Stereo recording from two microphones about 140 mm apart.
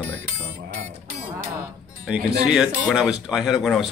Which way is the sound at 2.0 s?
5° right (ahead or behind).